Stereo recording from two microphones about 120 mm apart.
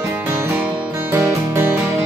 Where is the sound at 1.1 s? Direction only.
20° right (ahead or behind).